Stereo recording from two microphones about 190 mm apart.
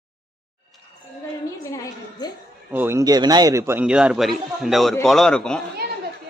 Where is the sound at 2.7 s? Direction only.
10° right (ahead or behind); by 5.6 s 5° left (ahead or behind).